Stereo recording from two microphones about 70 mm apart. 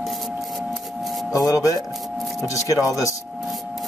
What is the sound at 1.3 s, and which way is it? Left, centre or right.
Speech, left.